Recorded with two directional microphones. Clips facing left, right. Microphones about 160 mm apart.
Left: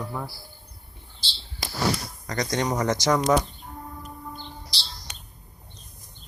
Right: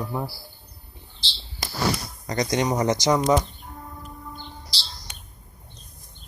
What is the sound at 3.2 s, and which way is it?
Speech, centre (ahead or behind).